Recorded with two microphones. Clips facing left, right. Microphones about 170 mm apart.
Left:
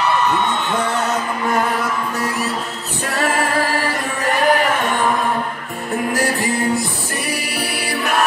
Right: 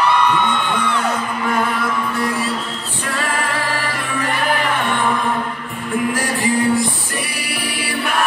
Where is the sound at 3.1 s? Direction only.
40° left (ahead or behind).